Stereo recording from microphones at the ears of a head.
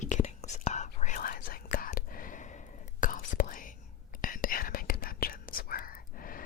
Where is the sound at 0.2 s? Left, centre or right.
Left.